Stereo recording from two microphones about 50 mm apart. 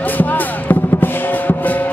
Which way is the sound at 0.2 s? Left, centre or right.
Left.